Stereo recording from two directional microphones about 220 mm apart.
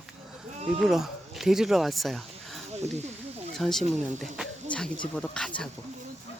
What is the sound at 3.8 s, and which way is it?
Speech, 35° right (ahead or behind).